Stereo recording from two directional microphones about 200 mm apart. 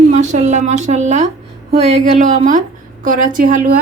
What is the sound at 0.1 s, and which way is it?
A woman's voice, 35° right (ahead or behind).